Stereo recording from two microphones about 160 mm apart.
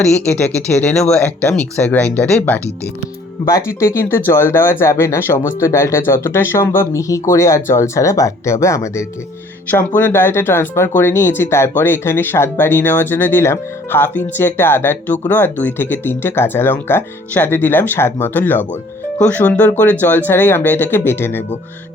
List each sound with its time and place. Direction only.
0.0 s speech: 10° left (ahead or behind)